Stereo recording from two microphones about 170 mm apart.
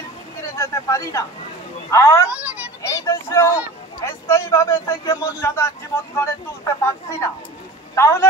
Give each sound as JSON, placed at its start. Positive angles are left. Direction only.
{"t": 0.4, "sound": "a sound", "side_deg": 15}
{"t": 1.9, "sound": "speech", "side_deg": 15}
{"t": 2.2, "sound": "a child's voice", "side_deg": -5}
{"t": 2.8, "sound": "speech", "side_deg": 20}